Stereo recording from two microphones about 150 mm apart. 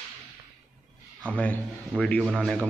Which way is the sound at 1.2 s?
10° left (ahead or behind).